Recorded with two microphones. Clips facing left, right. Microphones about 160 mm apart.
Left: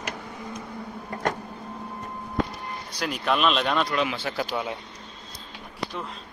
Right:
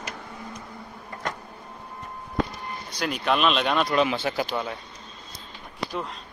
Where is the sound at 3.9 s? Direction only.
30° right (ahead or behind).